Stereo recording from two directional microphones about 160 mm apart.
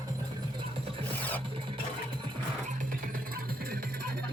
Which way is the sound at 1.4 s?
35° right (ahead or behind).